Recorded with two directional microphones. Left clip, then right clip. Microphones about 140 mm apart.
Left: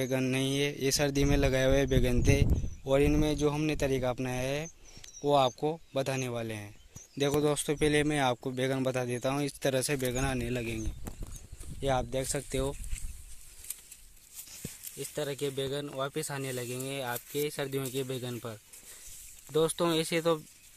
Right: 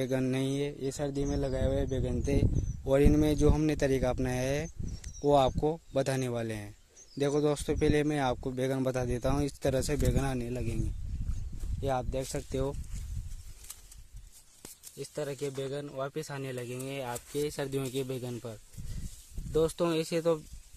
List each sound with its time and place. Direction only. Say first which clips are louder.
0.0 s speech: left 1 dB; 20° right (ahead or behind)
0.6 s speech: left 5 dB; centre (ahead or behind)
2.8 s speech: right 1 dB; 30° right (ahead or behind)
7.2 s speech: even; 25° right (ahead or behind)
10.5 s speech: left 3 dB; 5° right (ahead or behind)
11.8 s speech: left 2 dB; centre (ahead or behind)
15.0 s speech: left 1 dB; 5° left (ahead or behind)
17.4 s speech: right 1 dB; 20° right (ahead or behind)
19.5 s speech: left 1 dB; 10° right (ahead or behind)